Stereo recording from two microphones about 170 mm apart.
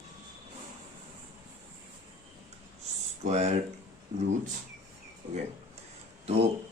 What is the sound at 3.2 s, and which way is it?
Speech, 40° right (ahead or behind).